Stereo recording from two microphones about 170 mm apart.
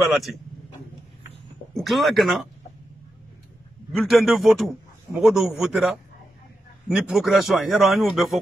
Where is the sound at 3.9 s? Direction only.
Centre (ahead or behind).